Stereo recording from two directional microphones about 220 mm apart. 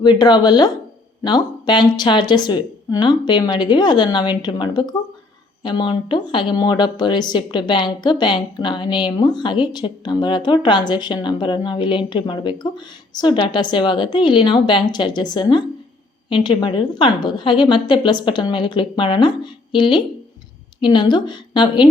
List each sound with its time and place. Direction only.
0.0 s speech: 20° left (ahead or behind)